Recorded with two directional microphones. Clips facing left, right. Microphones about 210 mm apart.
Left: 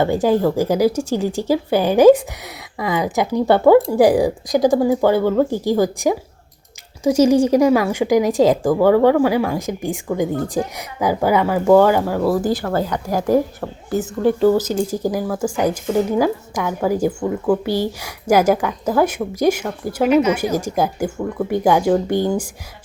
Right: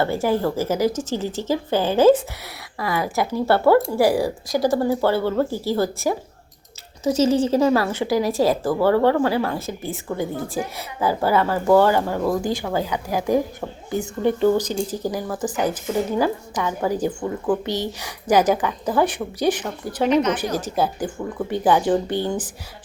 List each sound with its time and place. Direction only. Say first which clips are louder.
0.0 s speech: left 5 dB; 15° left (ahead or behind)
12.6 s a woman's voice: left 3 dB; 10° right (ahead or behind)
13.6 s speech: left 4 dB; 5° left (ahead or behind)